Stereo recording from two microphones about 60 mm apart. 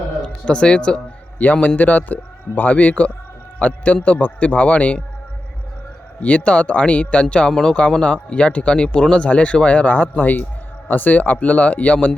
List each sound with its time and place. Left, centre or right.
0.2 s speech: centre
1.6 s speech: left
6.1 s speech: left